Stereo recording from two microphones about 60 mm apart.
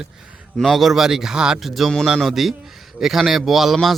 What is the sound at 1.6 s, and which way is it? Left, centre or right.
Speech, centre.